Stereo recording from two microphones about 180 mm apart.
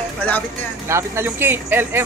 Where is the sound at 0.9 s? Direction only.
15° right (ahead or behind).